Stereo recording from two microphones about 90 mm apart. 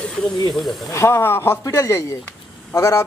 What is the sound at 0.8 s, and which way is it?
A man's voice, 30° left (ahead or behind).